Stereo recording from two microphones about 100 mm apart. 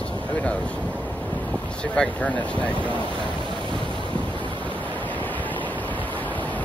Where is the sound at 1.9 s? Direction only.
5° left (ahead or behind).